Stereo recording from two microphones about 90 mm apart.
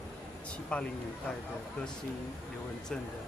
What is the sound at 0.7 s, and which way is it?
Speech, 10° left (ahead or behind).